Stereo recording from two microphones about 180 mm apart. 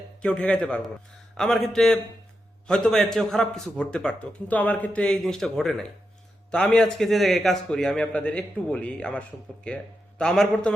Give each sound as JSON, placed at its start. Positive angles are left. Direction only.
{"t": 0.2, "sound": "a man's voice", "side_deg": 5}